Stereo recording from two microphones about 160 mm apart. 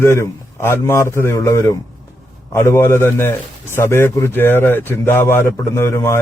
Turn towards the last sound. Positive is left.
turn(degrees=15)  # may be behind; listen again after turning